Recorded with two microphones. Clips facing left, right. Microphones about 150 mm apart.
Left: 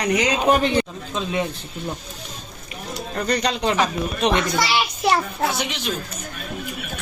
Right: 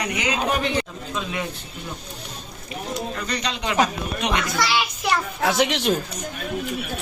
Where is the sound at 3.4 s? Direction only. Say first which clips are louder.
Right 2 dB; 35° left (ahead or behind).